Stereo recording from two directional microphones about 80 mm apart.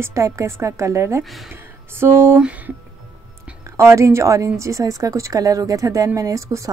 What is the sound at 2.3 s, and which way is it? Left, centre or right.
Speech, centre.